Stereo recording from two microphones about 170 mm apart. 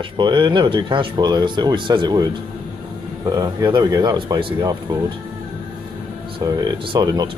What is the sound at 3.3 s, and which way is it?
Speech, 25° right (ahead or behind).